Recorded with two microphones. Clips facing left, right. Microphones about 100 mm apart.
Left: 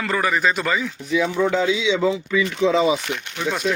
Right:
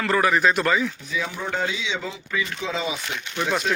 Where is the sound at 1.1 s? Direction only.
80° left.